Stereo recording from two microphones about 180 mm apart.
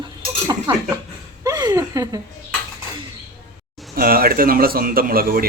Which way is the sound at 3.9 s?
55° right (ahead or behind).